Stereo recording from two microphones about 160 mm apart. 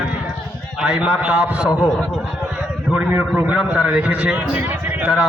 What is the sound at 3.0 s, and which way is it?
A man's voice, 10° right (ahead or behind).